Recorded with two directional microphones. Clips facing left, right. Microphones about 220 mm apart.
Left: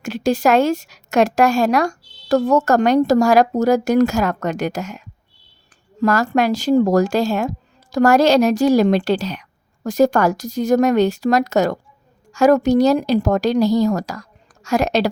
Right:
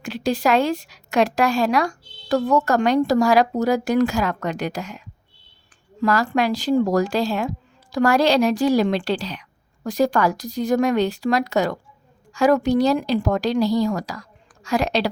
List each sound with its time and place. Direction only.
0.0 s a woman's voice: 45° left (ahead or behind)